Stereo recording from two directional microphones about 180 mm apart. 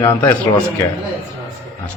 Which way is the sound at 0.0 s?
15° left (ahead or behind).